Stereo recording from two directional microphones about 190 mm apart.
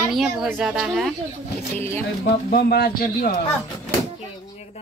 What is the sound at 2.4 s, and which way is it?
Speech, 55° left (ahead or behind).